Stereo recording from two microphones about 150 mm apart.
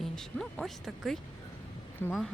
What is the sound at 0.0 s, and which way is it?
Speech, centre (ahead or behind).